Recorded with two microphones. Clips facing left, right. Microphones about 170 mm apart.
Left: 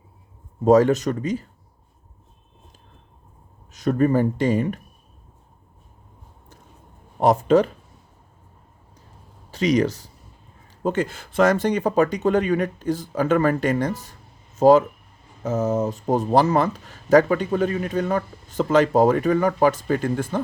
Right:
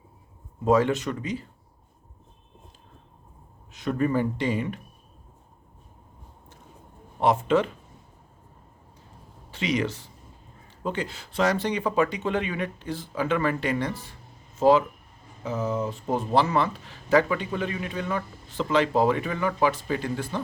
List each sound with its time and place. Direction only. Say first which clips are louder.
0.6 s speech: left 6 dB; 40° left (ahead or behind)
3.7 s speech: left 6 dB; 40° left (ahead or behind)
7.2 s speech: left 5 dB; 40° left (ahead or behind)
9.5 s speech: left 7 dB; 40° left (ahead or behind)